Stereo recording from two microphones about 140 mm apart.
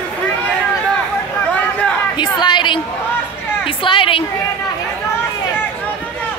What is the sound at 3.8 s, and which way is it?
Speech, 35° left (ahead or behind).